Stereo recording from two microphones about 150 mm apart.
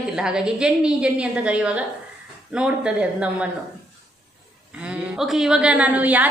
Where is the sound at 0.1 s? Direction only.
5° right (ahead or behind).